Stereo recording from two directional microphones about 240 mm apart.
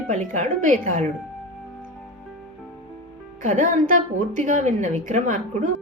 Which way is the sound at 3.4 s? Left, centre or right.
Right.